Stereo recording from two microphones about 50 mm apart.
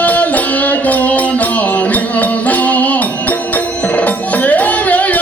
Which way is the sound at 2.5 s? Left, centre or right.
Left.